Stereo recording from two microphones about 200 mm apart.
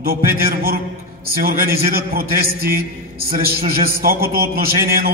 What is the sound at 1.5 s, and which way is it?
A man's voice, 50° right (ahead or behind).